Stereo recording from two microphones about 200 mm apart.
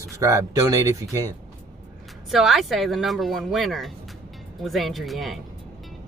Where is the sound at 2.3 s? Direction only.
Centre (ahead or behind).